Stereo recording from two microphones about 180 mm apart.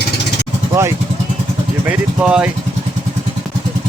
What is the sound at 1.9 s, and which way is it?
Vehicle, 5° right (ahead or behind).